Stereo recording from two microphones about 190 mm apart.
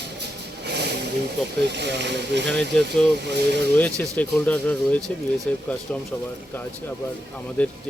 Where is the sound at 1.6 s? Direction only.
65° right (ahead or behind).